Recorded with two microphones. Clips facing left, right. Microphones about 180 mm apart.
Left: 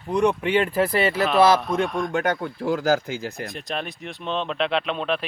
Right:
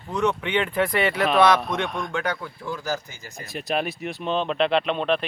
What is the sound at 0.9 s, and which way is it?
Speech, 30° left (ahead or behind).